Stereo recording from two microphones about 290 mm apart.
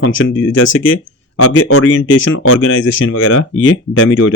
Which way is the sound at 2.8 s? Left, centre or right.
Left.